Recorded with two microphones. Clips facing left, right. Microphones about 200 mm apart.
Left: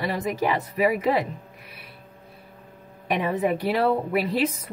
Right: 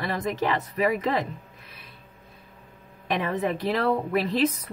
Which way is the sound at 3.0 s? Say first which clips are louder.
Left 2 dB; 10° left (ahead or behind).